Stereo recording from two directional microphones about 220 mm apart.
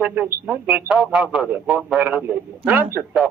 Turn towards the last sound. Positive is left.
turn(degrees=-5)  # may be behind; listen again after turning